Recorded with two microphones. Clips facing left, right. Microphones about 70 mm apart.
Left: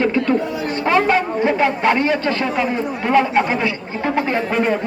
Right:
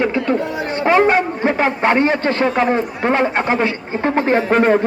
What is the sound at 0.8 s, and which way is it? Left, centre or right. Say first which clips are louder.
A man's voice: right 3 dB; right.